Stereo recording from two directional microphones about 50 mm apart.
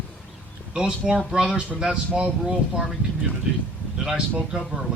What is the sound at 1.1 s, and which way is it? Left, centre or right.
Speech, centre.